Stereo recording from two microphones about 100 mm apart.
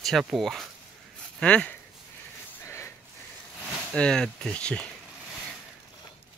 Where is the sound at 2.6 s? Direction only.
25° left (ahead or behind).